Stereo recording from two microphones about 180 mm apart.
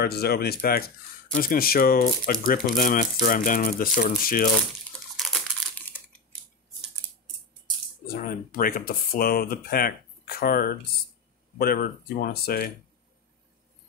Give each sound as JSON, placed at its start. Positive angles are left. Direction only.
{"t": 0.0, "sound": "speech", "side_deg": 60}
{"t": 5.1, "sound": "crumpling", "side_deg": 0}
{"t": 8.1, "sound": "speech", "side_deg": 50}